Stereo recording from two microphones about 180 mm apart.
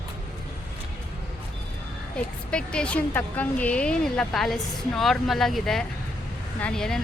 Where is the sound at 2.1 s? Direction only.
5° left (ahead or behind).